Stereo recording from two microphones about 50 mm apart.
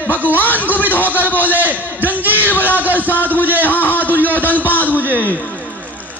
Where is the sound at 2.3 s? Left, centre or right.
Left.